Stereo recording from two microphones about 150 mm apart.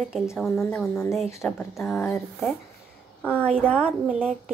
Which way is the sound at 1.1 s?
Centre (ahead or behind).